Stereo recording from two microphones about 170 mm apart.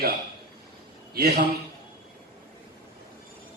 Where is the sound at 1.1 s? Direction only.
65° right (ahead or behind).